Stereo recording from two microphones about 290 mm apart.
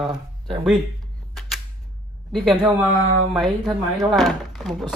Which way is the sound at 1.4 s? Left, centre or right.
Centre.